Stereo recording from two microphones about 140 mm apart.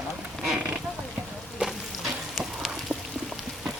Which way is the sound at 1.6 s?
Centre (ahead or behind).